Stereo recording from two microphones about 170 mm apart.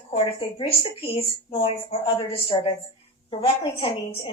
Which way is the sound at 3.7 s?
35° left (ahead or behind).